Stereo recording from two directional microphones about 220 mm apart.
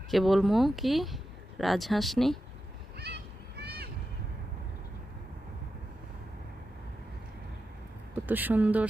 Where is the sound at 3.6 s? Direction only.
45° right (ahead or behind).